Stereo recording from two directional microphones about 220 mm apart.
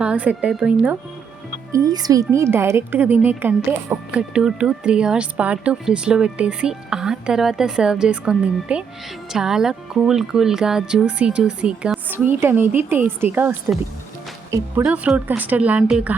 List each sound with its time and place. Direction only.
0.0 s speech: 5° right (ahead or behind)
1.7 s speech: 15° right (ahead or behind)